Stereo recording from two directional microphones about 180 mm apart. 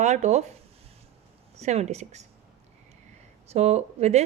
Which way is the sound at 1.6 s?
35° right (ahead or behind).